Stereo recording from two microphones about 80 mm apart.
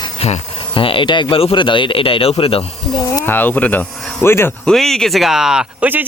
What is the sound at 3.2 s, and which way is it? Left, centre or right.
Speech, left.